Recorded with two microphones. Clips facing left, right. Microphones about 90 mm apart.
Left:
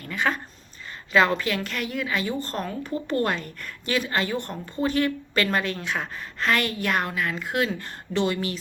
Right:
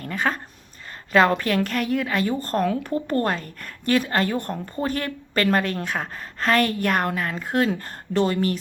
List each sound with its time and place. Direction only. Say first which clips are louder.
0.0 s a woman's voice: right 1 dB; 40° right (ahead or behind)